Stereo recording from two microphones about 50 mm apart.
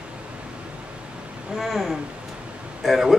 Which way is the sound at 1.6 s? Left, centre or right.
Centre.